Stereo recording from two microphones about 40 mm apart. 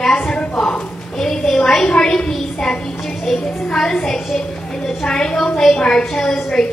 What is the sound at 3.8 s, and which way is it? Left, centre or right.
A woman's voice, centre.